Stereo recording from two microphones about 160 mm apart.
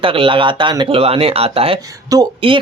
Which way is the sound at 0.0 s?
35° right (ahead or behind).